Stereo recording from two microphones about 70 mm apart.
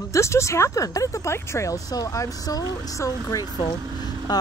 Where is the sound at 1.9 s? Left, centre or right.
Left.